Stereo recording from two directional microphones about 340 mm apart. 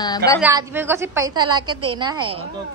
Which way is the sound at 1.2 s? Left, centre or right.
Right.